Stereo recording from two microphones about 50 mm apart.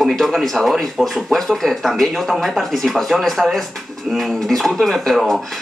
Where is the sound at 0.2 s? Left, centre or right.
Centre.